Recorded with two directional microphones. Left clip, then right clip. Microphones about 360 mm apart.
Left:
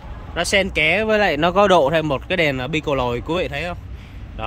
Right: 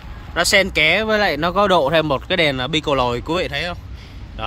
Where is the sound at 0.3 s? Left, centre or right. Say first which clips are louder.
Right 3 dB; centre.